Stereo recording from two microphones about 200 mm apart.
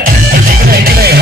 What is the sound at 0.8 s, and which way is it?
Music, 50° right (ahead or behind).